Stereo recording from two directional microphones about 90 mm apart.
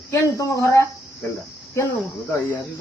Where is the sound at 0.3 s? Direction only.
40° left (ahead or behind).